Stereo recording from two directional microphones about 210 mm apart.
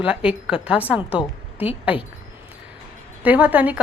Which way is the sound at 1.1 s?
25° left (ahead or behind).